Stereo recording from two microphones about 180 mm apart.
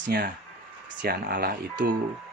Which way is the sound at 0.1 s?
60° right (ahead or behind).